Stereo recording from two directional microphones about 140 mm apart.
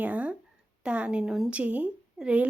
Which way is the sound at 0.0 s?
10° right (ahead or behind).